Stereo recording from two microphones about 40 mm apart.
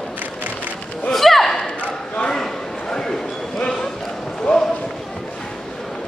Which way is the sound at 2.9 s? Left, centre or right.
Centre.